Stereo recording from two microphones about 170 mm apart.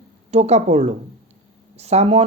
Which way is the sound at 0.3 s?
40° right (ahead or behind).